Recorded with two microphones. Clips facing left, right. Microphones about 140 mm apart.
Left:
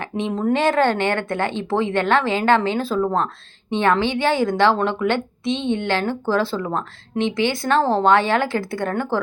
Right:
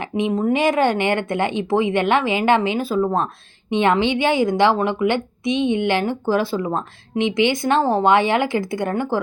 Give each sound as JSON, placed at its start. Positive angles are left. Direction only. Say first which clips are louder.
{"t": 0.0, "sound": "a woman's voice", "louder": "right 2 dB", "side_deg": -10}